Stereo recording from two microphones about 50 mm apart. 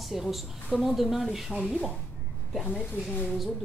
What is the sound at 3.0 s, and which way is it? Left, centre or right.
Speech, left.